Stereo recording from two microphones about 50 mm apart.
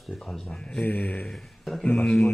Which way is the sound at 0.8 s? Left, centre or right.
Left.